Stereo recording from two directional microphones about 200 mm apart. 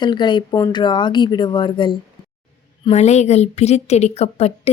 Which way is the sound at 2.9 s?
35° left (ahead or behind).